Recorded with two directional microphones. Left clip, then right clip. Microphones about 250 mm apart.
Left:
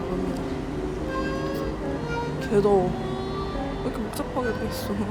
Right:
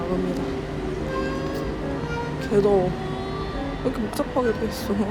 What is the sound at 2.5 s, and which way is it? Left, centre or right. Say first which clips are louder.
Speech: right 1 dB; centre.